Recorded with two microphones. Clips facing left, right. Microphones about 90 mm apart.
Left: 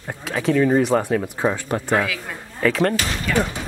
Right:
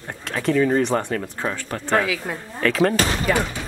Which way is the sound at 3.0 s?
40° right (ahead or behind).